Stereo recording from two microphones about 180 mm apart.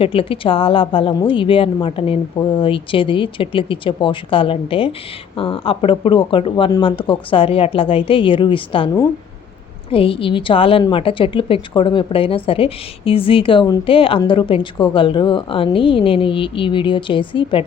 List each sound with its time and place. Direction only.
0.0 s a woman's voice: 30° left (ahead or behind)